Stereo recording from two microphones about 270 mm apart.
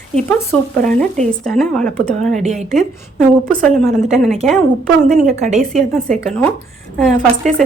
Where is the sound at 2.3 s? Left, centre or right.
Right.